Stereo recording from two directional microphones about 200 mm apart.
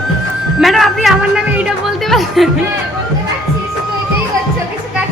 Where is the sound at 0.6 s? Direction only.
Centre (ahead or behind).